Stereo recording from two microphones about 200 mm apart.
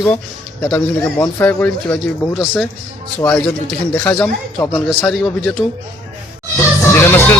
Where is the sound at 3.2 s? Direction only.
10° left (ahead or behind).